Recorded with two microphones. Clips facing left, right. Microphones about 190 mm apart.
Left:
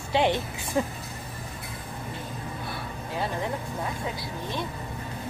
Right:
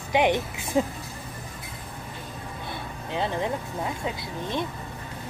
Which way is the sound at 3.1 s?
20° right (ahead or behind).